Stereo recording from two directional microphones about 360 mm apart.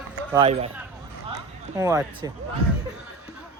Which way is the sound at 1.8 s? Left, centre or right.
Centre.